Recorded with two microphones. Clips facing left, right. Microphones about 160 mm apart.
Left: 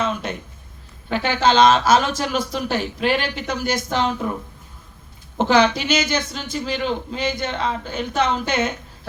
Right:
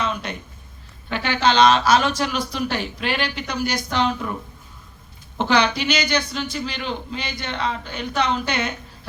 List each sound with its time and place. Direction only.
1.1 s speech: 45° left (ahead or behind)
5.4 s speech: 45° left (ahead or behind)